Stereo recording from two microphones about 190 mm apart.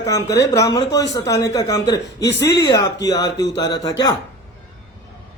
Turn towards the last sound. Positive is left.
turn(degrees=20)  # may be behind; listen again after turning